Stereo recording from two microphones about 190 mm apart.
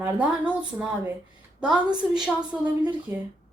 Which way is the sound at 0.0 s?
10° right (ahead or behind).